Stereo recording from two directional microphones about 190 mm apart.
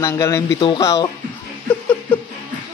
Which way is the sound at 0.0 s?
15° left (ahead or behind).